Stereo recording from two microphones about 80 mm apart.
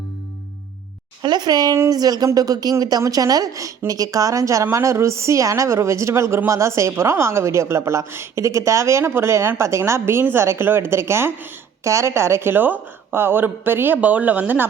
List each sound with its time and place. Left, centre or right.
1.2 s a woman's voice: right